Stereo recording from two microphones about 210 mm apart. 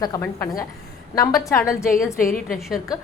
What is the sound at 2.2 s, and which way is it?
Speech, 45° left (ahead or behind).